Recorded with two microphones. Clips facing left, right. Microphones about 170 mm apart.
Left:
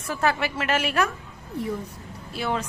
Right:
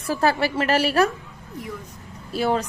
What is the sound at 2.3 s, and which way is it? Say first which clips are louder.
Speech: right 6 dB; 40° right (ahead or behind).